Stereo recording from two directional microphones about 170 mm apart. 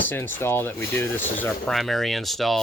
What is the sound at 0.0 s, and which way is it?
Speech, 10° left (ahead or behind).